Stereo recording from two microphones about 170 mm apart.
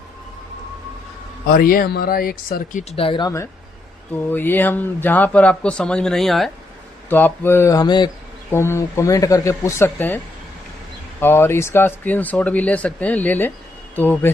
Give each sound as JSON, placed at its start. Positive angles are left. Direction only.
{"t": 1.5, "sound": "speech", "side_deg": 55}
{"t": 2.9, "sound": "speech", "side_deg": 30}
{"t": 8.4, "sound": "speech", "side_deg": 15}
{"t": 11.2, "sound": "speech", "side_deg": 15}